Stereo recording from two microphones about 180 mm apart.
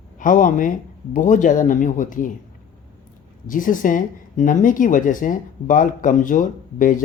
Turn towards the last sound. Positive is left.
turn(degrees=50)  # may be behind; listen again after turning